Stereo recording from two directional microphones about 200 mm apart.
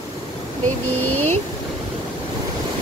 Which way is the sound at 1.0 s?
90° right.